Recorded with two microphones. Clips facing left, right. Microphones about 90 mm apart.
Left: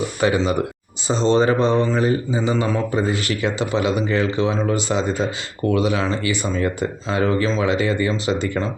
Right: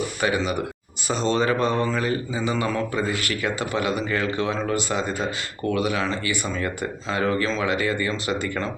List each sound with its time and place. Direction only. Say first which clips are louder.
0.2 s speech: left 6 dB; 30° left (ahead or behind)